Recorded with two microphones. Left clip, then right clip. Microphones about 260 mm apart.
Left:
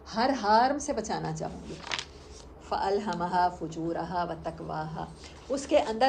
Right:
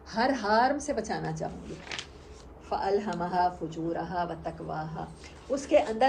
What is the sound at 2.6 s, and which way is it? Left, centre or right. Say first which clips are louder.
A woman's voice: even; centre.